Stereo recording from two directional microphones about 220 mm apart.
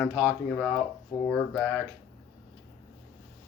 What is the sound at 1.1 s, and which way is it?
Speech, 20° left (ahead or behind).